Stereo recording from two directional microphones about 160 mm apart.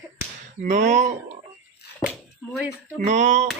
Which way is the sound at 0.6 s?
50° right (ahead or behind).